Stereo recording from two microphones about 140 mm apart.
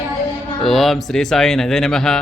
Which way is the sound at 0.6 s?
Centre (ahead or behind).